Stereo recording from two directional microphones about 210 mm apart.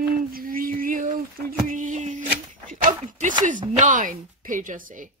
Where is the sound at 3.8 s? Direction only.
40° right (ahead or behind).